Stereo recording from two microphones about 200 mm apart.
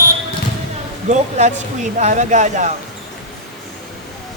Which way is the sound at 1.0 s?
35° right (ahead or behind).